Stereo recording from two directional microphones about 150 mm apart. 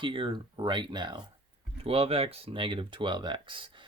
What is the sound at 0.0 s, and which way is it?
Speech, 35° right (ahead or behind).